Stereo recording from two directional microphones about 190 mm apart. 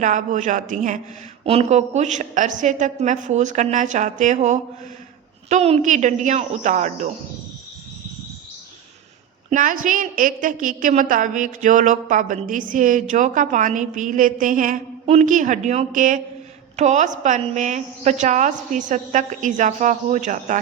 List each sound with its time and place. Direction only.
0.0 s a woman's voice: 40° right (ahead or behind)
9.5 s a woman's voice: 45° right (ahead or behind)